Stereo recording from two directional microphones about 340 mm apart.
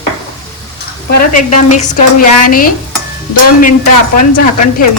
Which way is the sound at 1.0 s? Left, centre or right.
Left.